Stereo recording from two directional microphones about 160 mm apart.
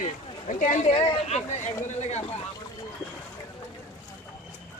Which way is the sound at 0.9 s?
35° left (ahead or behind).